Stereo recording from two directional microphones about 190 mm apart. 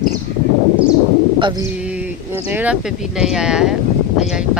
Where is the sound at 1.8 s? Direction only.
5° right (ahead or behind).